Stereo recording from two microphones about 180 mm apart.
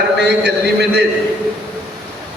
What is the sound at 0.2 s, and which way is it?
Speech, 70° right (ahead or behind).